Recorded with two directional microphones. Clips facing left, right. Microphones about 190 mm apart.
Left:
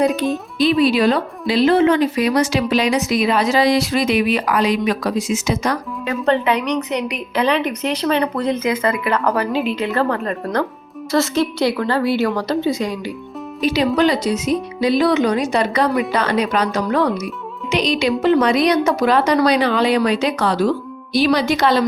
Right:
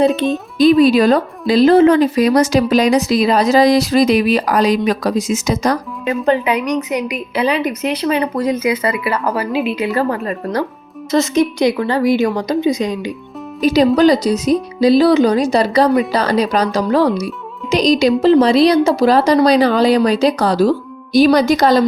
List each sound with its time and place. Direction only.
0.6 s a woman's voice: 45° right (ahead or behind)
6.1 s a woman's voice: 10° right (ahead or behind)
11.1 s a woman's voice: 15° right (ahead or behind)
13.6 s a woman's voice: 40° right (ahead or behind)